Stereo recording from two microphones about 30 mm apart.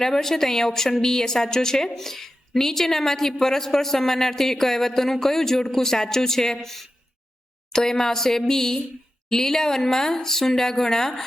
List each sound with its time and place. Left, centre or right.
0.0 s a woman's voice: centre